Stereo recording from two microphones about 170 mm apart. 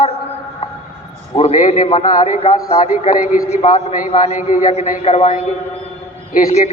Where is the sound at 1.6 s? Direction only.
45° left (ahead or behind).